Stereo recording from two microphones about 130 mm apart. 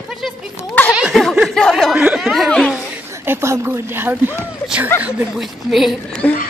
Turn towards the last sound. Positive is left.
turn(degrees=10)  # may be behind; listen again after turning